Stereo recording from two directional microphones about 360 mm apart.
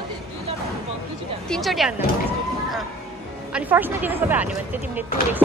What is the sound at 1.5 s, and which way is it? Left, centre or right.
Speech, centre.